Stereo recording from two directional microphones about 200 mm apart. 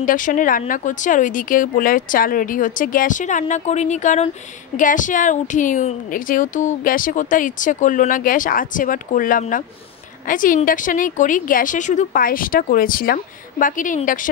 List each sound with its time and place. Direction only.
0.0 s a woman's voice: 40° left (ahead or behind)